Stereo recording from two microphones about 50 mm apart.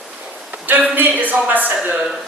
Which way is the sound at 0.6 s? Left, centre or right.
Right.